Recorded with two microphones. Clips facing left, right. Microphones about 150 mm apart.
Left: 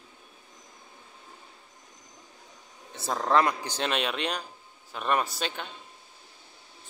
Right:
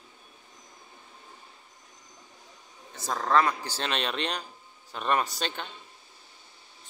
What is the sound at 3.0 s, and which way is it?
A man's voice, 15° left (ahead or behind).